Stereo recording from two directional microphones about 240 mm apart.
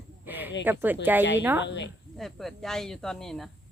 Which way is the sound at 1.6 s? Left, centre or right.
Left.